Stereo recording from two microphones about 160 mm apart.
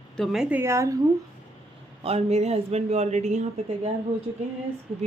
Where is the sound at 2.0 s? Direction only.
40° right (ahead or behind).